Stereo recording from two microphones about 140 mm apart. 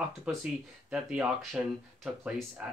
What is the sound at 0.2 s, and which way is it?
Speech, 5° right (ahead or behind).